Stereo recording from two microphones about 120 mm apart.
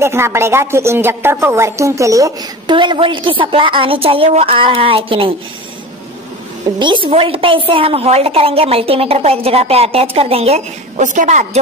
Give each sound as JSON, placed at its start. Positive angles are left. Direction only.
{"t": 0.0, "sound": "a woman's voice", "side_deg": -20}
{"t": 2.6, "sound": "a woman's voice", "side_deg": -40}
{"t": 6.8, "sound": "a woman's voice", "side_deg": -40}